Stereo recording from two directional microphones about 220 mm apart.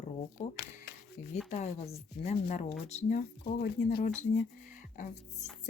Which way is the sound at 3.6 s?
45° left (ahead or behind).